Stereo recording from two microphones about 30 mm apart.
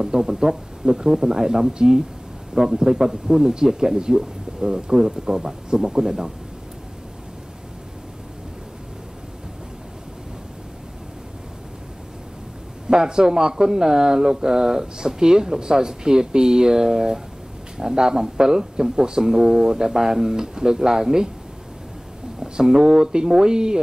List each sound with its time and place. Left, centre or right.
0.0 s speech: centre
12.8 s speech: right
22.4 s speech: centre